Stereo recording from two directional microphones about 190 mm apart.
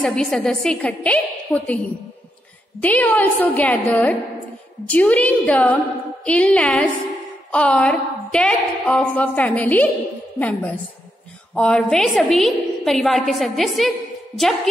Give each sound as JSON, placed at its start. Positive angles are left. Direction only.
{"t": 0.0, "sound": "a woman's voice", "side_deg": 5}
{"t": 2.8, "sound": "a woman's voice", "side_deg": 10}